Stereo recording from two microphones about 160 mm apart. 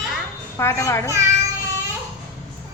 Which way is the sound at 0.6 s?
15° left (ahead or behind).